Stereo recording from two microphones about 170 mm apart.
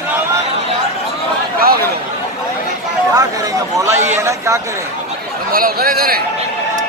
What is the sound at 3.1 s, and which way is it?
A man's voice, 20° right (ahead or behind).